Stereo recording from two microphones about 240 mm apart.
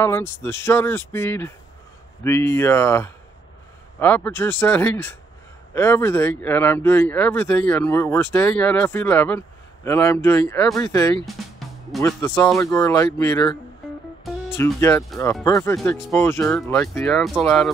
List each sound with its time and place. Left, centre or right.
0.0 s speech: centre
14.2 s music: centre
15.4 s speech: centre